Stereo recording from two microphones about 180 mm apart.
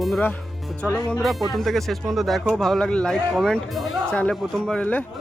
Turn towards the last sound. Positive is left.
turn(degrees=10)  # may be behind; listen again after turning